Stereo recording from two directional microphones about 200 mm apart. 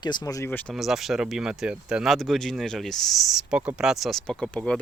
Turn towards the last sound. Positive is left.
turn(degrees=5)  # may be behind; listen again after turning